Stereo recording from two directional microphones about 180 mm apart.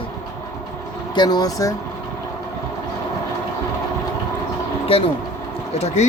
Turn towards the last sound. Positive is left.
turn(degrees=35)  # may be behind; listen again after turning